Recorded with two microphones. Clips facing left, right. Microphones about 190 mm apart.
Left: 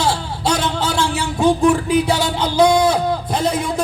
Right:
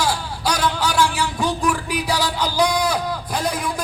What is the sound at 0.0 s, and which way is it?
Speech, 25° left (ahead or behind).